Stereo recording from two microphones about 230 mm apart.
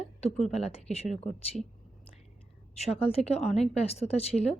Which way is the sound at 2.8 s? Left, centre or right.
Left.